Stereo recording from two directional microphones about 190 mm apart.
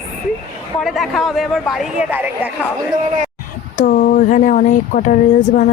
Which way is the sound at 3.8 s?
50° left (ahead or behind).